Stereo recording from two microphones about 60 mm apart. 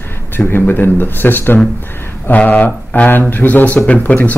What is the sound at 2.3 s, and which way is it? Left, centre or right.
A man's voice, left.